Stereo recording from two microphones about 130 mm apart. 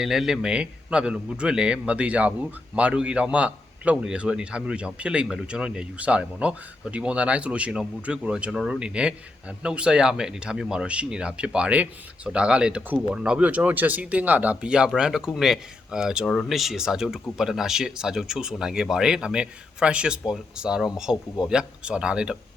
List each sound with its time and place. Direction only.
0.0 s a man's voice: 5° right (ahead or behind)